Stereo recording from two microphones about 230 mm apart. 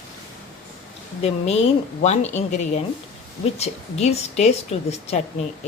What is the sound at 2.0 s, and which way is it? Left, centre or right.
A woman's voice, left.